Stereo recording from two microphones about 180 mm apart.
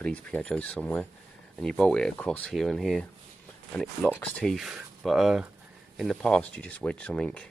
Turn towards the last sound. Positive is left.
turn(degrees=5)  # may be behind; listen again after turning